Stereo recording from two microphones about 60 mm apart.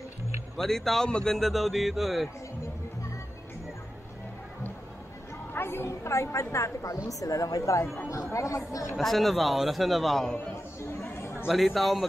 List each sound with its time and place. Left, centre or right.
0.6 s speech: centre
5.5 s speech: left
7.1 s speech: left
8.1 s speech: left
8.9 s speech: centre
10.5 s a sound: left
11.4 s speech: centre